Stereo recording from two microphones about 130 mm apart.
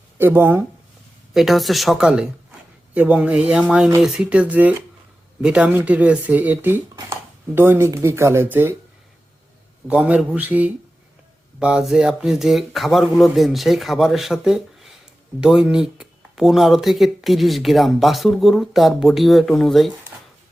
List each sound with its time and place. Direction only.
0.2 s speech: 15° right (ahead or behind)
1.3 s speech: centre (ahead or behind); by 8.7 s 15° right (ahead or behind)
9.8 s speech: 10° right (ahead or behind)